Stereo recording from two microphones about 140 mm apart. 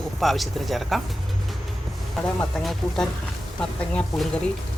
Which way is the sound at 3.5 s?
10° left (ahead or behind).